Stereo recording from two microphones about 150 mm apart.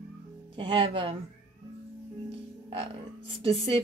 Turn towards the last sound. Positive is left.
turn(degrees=-35)  # may be behind; listen again after turning